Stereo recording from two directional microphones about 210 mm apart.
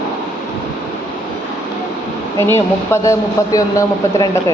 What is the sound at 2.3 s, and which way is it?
A man's voice, 10° left (ahead or behind).